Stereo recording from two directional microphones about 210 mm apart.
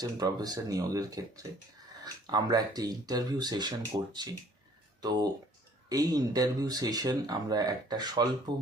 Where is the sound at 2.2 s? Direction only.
20° right (ahead or behind).